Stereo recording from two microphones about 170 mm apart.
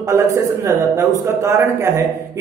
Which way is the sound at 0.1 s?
15° right (ahead or behind).